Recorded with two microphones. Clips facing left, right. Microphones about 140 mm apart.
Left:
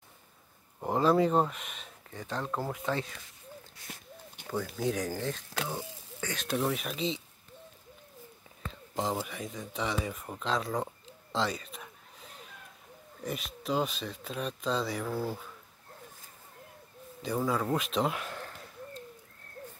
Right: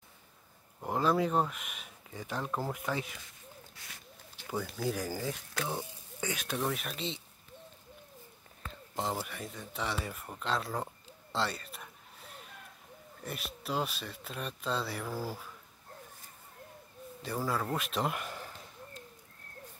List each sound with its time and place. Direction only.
0.8 s speech: centre (ahead or behind)
4.5 s speech: centre (ahead or behind)
5.5 s speech: 20° right (ahead or behind)
6.4 s speech: centre (ahead or behind)
8.6 s speech: centre (ahead or behind)
17.2 s speech: centre (ahead or behind)